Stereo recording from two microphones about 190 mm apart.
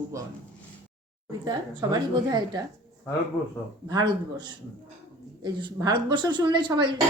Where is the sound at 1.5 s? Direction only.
20° right (ahead or behind).